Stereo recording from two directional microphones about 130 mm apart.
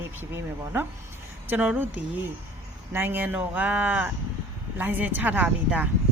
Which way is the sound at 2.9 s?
15° right (ahead or behind).